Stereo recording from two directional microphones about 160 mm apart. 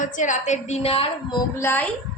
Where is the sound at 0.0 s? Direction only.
50° left (ahead or behind); by 1.4 s 35° left (ahead or behind).